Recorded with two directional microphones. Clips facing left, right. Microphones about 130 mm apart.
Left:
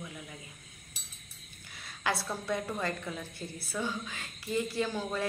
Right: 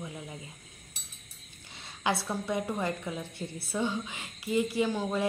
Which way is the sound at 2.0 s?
20° right (ahead or behind).